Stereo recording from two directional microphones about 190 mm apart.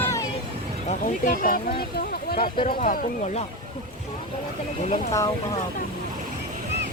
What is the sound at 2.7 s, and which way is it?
Speech, 50° left (ahead or behind).